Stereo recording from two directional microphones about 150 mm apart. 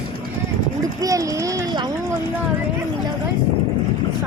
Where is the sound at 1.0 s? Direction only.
20° right (ahead or behind).